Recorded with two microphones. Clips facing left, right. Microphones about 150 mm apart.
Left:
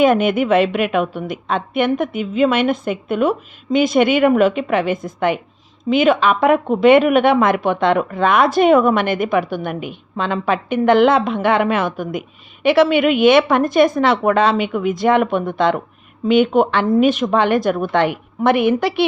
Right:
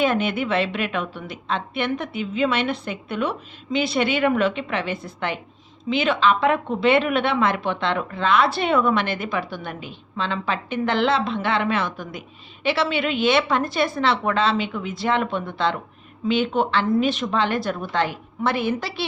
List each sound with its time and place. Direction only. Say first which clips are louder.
0.0 s a woman's voice: left 7 dB; 50° left (ahead or behind)